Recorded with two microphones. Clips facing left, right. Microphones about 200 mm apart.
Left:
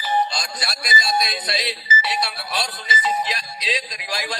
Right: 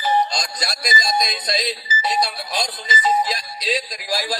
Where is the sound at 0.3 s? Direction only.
40° right (ahead or behind).